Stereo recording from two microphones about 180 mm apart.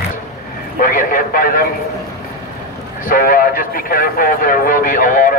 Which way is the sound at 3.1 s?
55° left (ahead or behind).